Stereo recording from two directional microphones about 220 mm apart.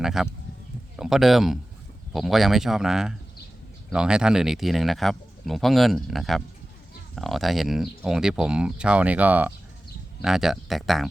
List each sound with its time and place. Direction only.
0.0 s speech: centre (ahead or behind)